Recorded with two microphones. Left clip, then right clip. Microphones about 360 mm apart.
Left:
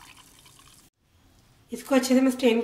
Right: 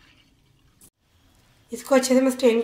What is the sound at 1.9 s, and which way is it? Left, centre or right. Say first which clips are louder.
Speech: right 4 dB; centre.